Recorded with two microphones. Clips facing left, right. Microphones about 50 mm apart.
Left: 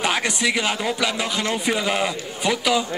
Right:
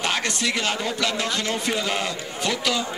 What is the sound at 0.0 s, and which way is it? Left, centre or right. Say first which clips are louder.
Speech: left 3 dB; centre.